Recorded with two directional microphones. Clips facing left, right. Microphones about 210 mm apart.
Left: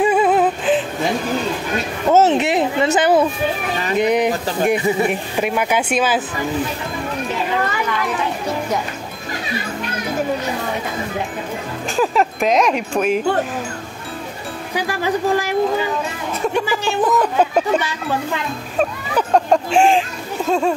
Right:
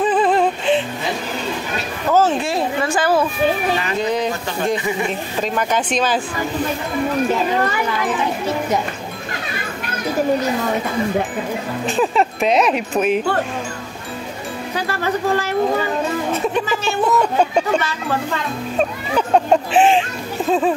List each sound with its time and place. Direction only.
0.0 s music: 10° left (ahead or behind)
2.0 s a sound: 20° left (ahead or behind)
4.0 s speech: 15° left (ahead or behind)
12.0 s speech: centre (ahead or behind)
14.8 s speech: 15° left (ahead or behind)
16.5 s speech: 15° left (ahead or behind)
18.8 s speech: centre (ahead or behind)